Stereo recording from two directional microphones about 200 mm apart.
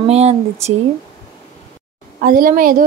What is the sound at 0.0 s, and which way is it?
Speech, 30° right (ahead or behind).